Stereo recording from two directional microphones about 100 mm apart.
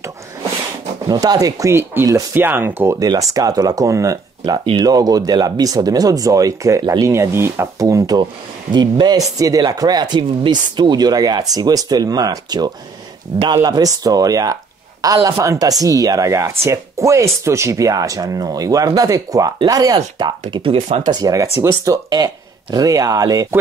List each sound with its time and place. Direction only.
1.2 s speech: 40° right (ahead or behind)
1.7 s speech: 25° right (ahead or behind)
3.0 s speech: 35° right (ahead or behind)
8.7 s speech: 45° right (ahead or behind)
20.6 s speech: 70° right (ahead or behind)
21.1 s speech: 35° right (ahead or behind)